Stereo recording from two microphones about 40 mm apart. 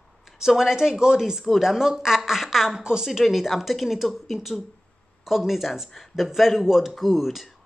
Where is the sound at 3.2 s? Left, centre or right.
Centre.